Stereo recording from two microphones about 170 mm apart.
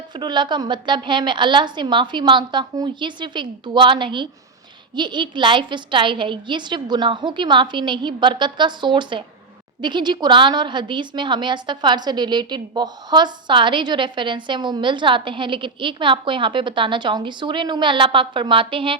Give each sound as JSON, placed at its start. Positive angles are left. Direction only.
{"t": 0.1, "sound": "a woman's voice", "side_deg": -25}